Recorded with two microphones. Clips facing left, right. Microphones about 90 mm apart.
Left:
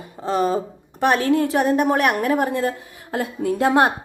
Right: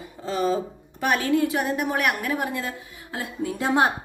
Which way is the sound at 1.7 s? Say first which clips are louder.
Left 6 dB; 45° left (ahead or behind).